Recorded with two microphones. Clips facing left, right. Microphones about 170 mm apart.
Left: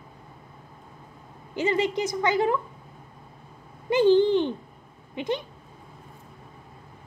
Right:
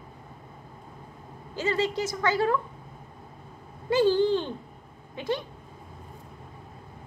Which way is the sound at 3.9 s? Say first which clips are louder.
Left 3 dB; 20° left (ahead or behind).